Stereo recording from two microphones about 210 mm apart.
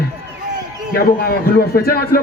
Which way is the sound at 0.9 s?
45° left (ahead or behind).